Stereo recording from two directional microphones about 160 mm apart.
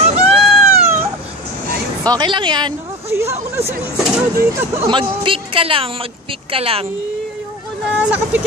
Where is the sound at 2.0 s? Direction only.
25° right (ahead or behind).